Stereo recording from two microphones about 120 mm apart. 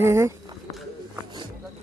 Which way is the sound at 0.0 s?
20° right (ahead or behind).